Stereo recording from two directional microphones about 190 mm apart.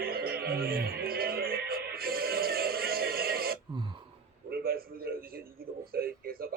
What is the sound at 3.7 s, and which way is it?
Throat clearing, 25° right (ahead or behind).